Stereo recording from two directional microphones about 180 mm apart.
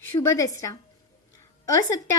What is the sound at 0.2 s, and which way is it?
Speech, 15° left (ahead or behind).